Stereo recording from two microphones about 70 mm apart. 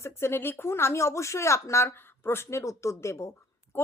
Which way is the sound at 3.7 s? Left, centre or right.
Left.